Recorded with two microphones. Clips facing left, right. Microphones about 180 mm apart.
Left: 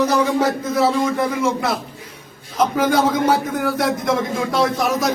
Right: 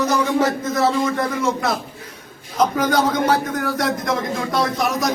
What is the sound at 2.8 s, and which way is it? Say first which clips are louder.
A man's voice: left 4 dB; 5° left (ahead or behind).